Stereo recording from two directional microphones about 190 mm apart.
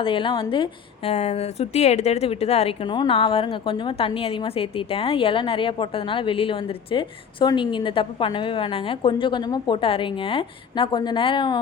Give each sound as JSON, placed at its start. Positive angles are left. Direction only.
{"t": 0.0, "sound": "a woman's voice", "side_deg": 25}